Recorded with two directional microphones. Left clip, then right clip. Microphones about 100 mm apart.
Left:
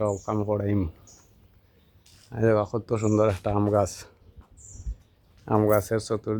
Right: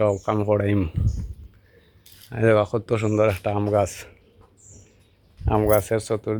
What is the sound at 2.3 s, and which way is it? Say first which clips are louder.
Speech: right 4 dB; 20° right (ahead or behind).